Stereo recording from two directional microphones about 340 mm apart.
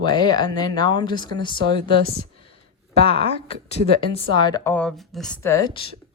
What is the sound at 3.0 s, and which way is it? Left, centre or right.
Speech, centre.